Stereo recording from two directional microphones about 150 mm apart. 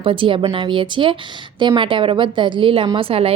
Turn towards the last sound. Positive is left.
turn(degrees=-40)  # may be behind; listen again after turning